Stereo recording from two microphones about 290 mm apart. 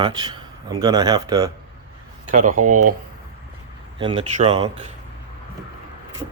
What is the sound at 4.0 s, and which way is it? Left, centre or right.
Speech, centre.